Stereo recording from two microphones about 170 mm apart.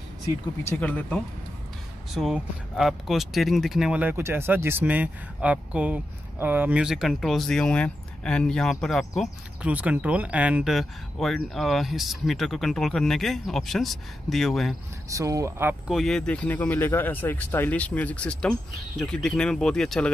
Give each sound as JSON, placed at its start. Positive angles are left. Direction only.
{"t": 0.7, "sound": "speech", "side_deg": 10}
{"t": 15.0, "sound": "speech", "side_deg": -20}
{"t": 15.9, "sound": "speech", "side_deg": 0}